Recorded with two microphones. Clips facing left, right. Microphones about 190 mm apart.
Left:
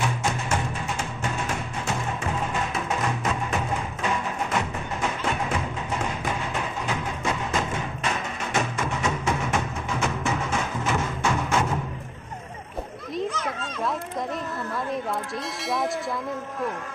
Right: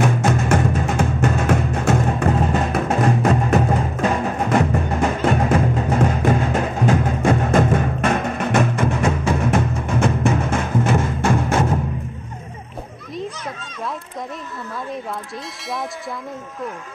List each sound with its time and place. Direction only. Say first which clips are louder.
0.0 s music: right 9 dB; 55° right (ahead or behind)